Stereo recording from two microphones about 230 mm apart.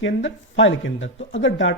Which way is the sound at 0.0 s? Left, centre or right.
Left.